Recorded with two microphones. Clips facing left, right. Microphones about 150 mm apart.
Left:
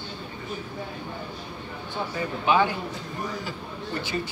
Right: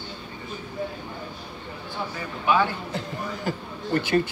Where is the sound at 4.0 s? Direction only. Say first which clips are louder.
Right 8 dB; 55° right (ahead or behind).